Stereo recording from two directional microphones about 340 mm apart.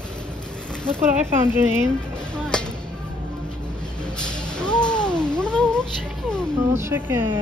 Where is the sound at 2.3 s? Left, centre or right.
Centre.